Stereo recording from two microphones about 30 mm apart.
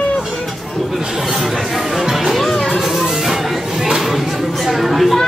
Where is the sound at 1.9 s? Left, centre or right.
Centre.